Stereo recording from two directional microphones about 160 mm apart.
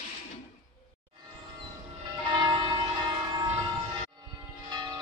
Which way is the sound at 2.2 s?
30° right (ahead or behind).